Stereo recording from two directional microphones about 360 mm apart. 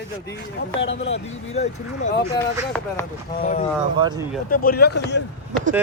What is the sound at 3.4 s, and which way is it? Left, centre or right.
Speech, centre.